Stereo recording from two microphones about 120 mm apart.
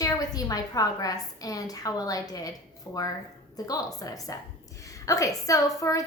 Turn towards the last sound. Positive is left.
turn(degrees=30)  # may be behind; listen again after turning